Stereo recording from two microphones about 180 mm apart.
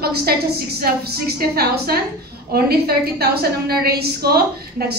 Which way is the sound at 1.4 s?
60° right (ahead or behind).